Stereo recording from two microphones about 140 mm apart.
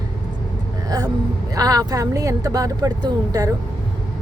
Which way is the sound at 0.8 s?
25° right (ahead or behind).